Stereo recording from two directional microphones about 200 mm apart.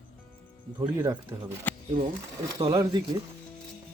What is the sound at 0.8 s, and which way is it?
Speech, 15° right (ahead or behind).